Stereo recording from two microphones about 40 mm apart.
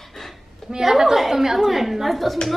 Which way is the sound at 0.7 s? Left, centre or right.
Centre.